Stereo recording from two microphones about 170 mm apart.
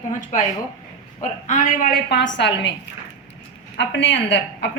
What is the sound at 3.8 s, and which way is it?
Speech, 90° left.